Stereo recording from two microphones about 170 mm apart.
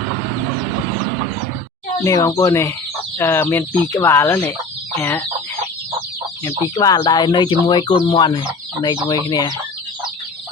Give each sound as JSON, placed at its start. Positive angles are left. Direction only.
{"t": 2.0, "sound": "speech", "side_deg": 15}
{"t": 6.4, "sound": "speech", "side_deg": 20}